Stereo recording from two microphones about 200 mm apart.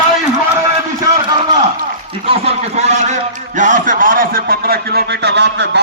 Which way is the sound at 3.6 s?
40° right (ahead or behind).